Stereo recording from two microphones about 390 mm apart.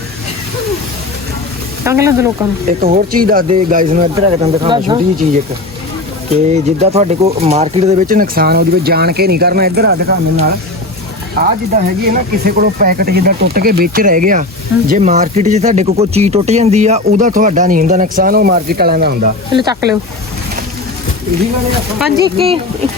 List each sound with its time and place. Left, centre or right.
1.8 s speech: centre
2.6 s speech: right
6.5 s speech: centre
19.5 s speech: centre
21.9 s speech: centre